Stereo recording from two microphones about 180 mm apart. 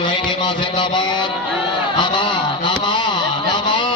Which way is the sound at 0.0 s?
25° left (ahead or behind).